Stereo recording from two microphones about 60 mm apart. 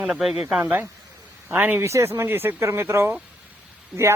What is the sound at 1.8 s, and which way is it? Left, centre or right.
Speech, right.